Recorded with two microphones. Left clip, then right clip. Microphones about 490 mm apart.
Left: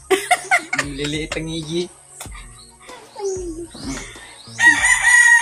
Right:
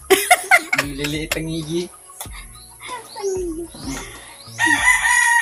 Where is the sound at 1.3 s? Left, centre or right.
Right.